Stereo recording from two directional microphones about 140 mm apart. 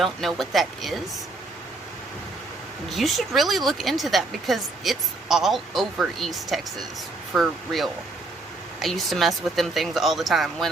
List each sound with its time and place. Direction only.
0.0 s speech: centre (ahead or behind)
2.9 s speech: centre (ahead or behind)